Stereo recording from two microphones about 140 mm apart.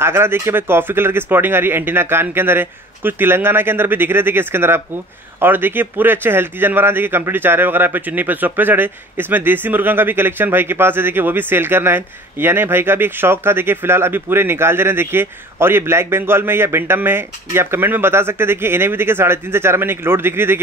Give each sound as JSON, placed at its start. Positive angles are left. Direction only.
{"t": 0.0, "sound": "speech", "side_deg": -15}